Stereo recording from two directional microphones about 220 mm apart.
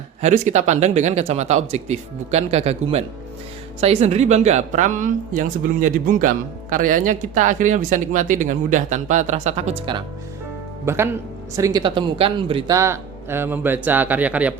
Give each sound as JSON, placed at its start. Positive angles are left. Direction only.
{"t": 0.2, "sound": "speech", "side_deg": -30}
{"t": 10.8, "sound": "speech", "side_deg": -10}